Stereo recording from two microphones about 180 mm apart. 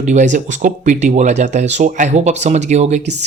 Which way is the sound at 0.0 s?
40° right (ahead or behind).